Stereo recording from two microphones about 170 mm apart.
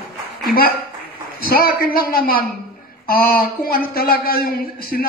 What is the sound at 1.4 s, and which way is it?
A man's voice, 60° left (ahead or behind).